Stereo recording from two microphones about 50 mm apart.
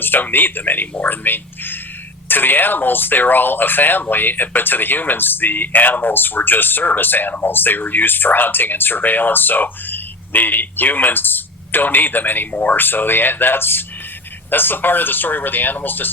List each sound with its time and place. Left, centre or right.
0.0 s speech: left